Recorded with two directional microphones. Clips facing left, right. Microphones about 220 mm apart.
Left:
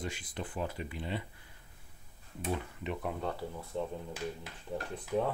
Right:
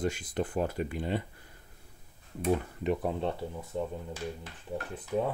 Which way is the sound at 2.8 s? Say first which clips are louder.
Right 8 dB; 40° right (ahead or behind).